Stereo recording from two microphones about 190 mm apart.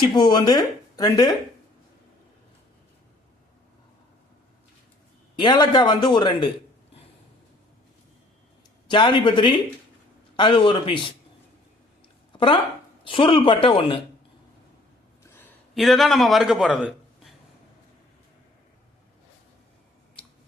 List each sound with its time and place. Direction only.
0.1 s speech: 25° left (ahead or behind)
5.4 s speech: 20° left (ahead or behind)
8.9 s speech: 25° left (ahead or behind)
12.3 s a sound: 25° left (ahead or behind)
13.1 s speech: 30° left (ahead or behind)
15.2 s a sound: 10° left (ahead or behind)
15.7 s a man's voice: centre (ahead or behind)